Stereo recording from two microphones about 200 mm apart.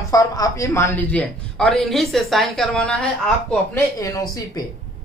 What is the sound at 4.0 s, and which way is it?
Speech, 15° left (ahead or behind).